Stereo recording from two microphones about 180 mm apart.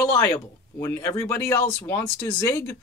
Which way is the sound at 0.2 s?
15° left (ahead or behind).